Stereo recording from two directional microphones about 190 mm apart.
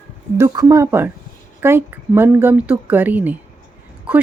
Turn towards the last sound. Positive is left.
turn(degrees=-5)  # may be behind; listen again after turning